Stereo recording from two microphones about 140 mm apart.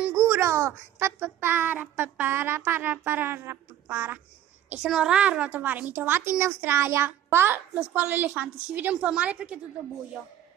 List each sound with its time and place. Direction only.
0.0 s a woman's voice: 20° right (ahead or behind)